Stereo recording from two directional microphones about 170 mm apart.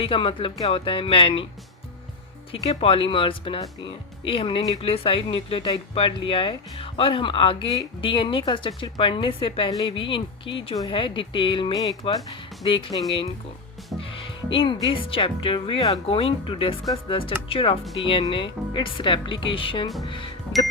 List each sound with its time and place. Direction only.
0.0 s speech: 30° left (ahead or behind)
2.5 s speech: 35° left (ahead or behind)
14.0 s music: 30° left (ahead or behind)
14.8 s speech: 30° left (ahead or behind)